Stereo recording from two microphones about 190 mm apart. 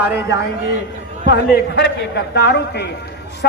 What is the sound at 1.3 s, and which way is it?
A man's voice, 60° left (ahead or behind).